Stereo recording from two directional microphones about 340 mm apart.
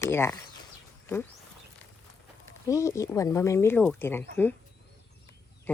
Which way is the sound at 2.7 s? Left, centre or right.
Centre.